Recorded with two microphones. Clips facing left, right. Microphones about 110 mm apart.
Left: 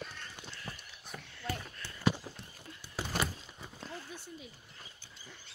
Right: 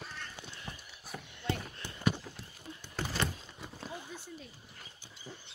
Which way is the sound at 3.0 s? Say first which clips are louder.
Right 1 dB; 10° left (ahead or behind).